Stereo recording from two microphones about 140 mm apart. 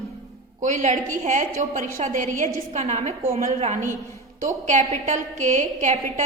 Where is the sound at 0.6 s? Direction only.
60° right (ahead or behind).